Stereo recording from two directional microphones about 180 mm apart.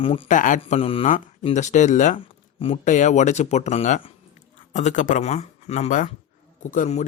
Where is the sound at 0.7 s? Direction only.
30° left (ahead or behind).